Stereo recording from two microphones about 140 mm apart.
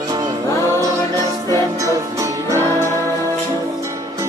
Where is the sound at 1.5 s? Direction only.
25° right (ahead or behind).